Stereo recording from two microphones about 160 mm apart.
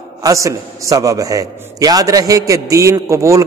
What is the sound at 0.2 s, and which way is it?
A man's voice, 20° right (ahead or behind).